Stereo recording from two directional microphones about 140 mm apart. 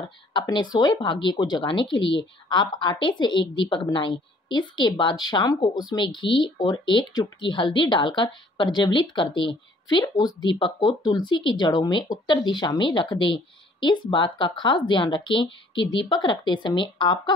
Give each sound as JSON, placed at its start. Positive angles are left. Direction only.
{"t": 0.3, "sound": "speech", "side_deg": 35}